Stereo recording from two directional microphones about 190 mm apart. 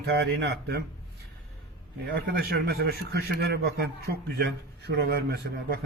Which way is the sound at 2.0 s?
55° right (ahead or behind).